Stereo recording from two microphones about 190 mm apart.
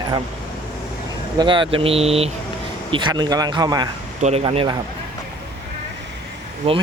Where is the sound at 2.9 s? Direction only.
20° right (ahead or behind).